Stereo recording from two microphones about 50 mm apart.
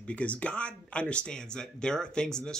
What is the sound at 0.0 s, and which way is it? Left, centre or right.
Speech, left.